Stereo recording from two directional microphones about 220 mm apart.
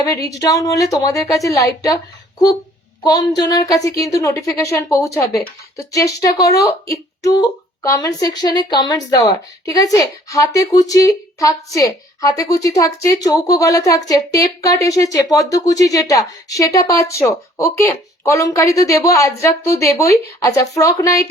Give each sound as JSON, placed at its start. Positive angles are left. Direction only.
{"t": 0.0, "sound": "a woman's voice", "side_deg": 15}
{"t": 3.0, "sound": "a woman's voice", "side_deg": 15}
{"t": 6.4, "sound": "speech", "side_deg": 45}
{"t": 6.7, "sound": "a woman's voice", "side_deg": 15}